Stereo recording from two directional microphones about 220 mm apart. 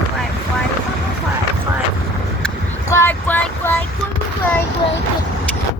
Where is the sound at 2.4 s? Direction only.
10° left (ahead or behind).